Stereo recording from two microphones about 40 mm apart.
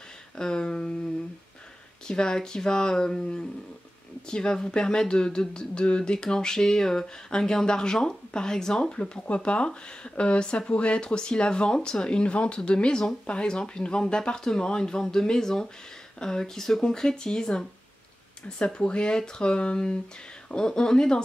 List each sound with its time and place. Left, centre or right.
0.4 s speech: centre
2.0 s speech: centre